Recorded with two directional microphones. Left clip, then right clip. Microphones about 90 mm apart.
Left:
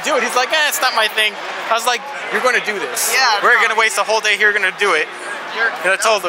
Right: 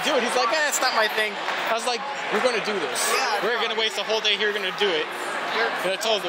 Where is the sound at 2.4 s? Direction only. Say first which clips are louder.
Left 8 dB; 30° left (ahead or behind).